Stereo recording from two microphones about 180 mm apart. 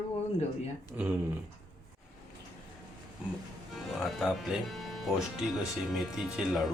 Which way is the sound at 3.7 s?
Centre (ahead or behind).